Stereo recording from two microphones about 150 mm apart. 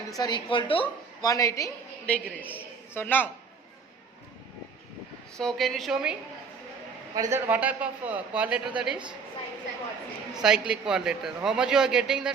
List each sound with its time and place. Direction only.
0.2 s speech: 30° left (ahead or behind)
1.3 s a woman's voice: 20° left (ahead or behind)
2.0 s a man's voice: 10° left (ahead or behind)
5.4 s a man's voice: centre (ahead or behind)
7.1 s a man's voice: 20° right (ahead or behind)
10.3 s a man's voice: 5° right (ahead or behind)